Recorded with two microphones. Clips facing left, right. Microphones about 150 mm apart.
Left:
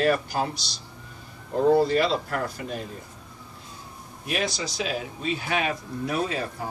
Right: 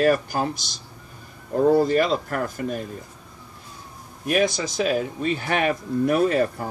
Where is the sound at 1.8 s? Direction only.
50° right (ahead or behind).